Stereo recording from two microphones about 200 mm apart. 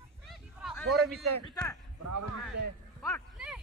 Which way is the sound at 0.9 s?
Centre (ahead or behind).